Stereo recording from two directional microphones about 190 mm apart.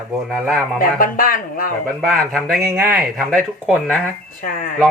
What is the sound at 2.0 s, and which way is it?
Speech, centre (ahead or behind).